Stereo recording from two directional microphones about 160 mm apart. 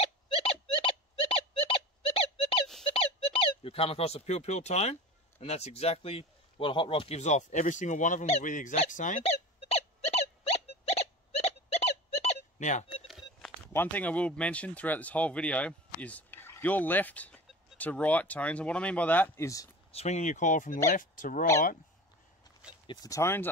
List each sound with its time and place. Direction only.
0.0 s a sound: 35° left (ahead or behind)
2.9 s squeak: 35° left (ahead or behind)
5.4 s speech: 40° left (ahead or behind)
8.7 s a sound: 50° left (ahead or behind)
12.9 s telephone dialing: centre (ahead or behind)
13.7 s speech: 10° left (ahead or behind)
19.9 s speech: 45° left (ahead or behind)
22.8 s speech: 20° left (ahead or behind)